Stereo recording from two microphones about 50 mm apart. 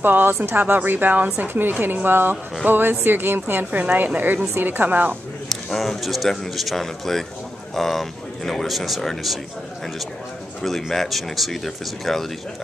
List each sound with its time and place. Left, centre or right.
0.0 s a woman's voice: right
3.8 s speech: right
5.5 s speech: centre
10.6 s speech: centre